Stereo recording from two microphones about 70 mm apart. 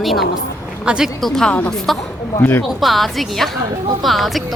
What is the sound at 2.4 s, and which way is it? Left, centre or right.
Speech, left.